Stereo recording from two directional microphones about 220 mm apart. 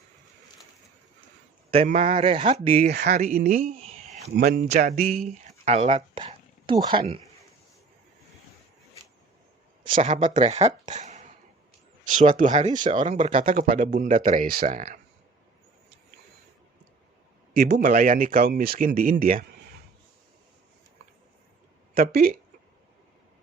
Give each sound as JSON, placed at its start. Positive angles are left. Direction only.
{"t": 1.7, "sound": "speech", "side_deg": -25}
{"t": 2.7, "sound": "speech", "side_deg": -45}
{"t": 3.8, "sound": "a sound", "side_deg": -25}
{"t": 4.7, "sound": "speech", "side_deg": -40}
{"t": 5.7, "sound": "speech", "side_deg": -30}
{"t": 9.9, "sound": "speech", "side_deg": -35}
{"t": 17.5, "sound": "speech", "side_deg": -40}
{"t": 21.9, "sound": "speech", "side_deg": -40}